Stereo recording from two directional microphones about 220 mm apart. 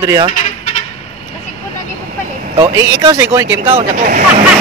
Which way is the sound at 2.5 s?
20° right (ahead or behind).